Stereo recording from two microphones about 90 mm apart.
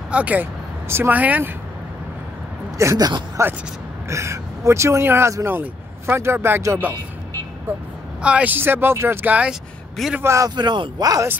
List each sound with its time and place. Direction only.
0.1 s speech: 15° right (ahead or behind)
2.8 s a man's voice: 35° right (ahead or behind)
8.2 s speech: 15° right (ahead or behind)
9.5 s speech: 5° right (ahead or behind)
10.2 s a man's voice: 35° right (ahead or behind)
10.5 s speech: 55° right (ahead or behind)